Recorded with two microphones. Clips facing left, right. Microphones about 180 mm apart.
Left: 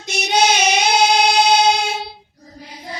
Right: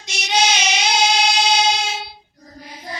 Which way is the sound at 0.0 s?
55° left (ahead or behind).